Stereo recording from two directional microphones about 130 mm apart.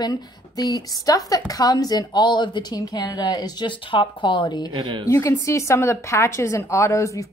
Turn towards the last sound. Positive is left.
turn(degrees=25)  # may be behind; listen again after turning